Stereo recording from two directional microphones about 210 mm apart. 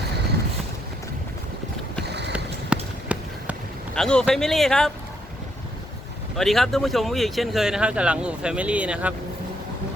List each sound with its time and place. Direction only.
2.0 s a sound: 55° right (ahead or behind)
2.3 s run: 5° right (ahead or behind)
3.9 s speech: 5° left (ahead or behind)
6.3 s speech: centre (ahead or behind)